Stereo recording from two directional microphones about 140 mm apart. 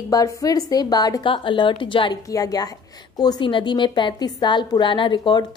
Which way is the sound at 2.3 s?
25° left (ahead or behind).